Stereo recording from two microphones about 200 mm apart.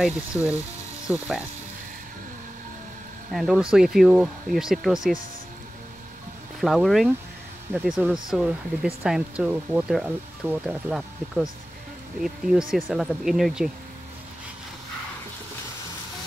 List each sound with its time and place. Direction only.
0.0 s speech: 5° right (ahead or behind)
1.1 s ratchet: 10° right (ahead or behind)
3.3 s speech: centre (ahead or behind)
6.6 s speech: centre (ahead or behind)